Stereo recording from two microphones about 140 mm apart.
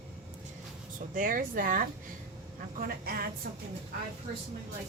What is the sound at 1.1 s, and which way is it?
A woman's voice, 85° right.